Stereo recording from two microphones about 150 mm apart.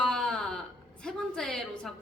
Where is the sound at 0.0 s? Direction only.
5° left (ahead or behind).